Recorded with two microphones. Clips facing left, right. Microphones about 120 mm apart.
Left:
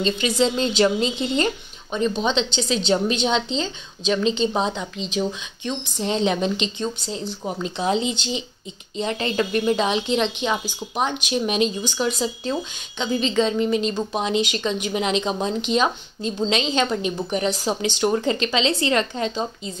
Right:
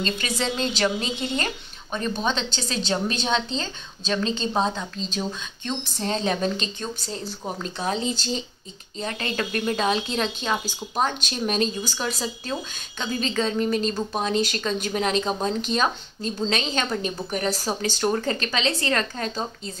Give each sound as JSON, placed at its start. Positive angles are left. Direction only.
{"t": 0.0, "sound": "speech", "side_deg": 25}
{"t": 7.4, "sound": "a woman's voice", "side_deg": 10}
{"t": 7.7, "sound": "a woman's voice", "side_deg": 20}